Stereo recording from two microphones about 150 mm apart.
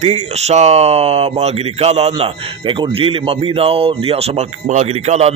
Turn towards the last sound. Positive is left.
turn(degrees=-45)  # may be behind; listen again after turning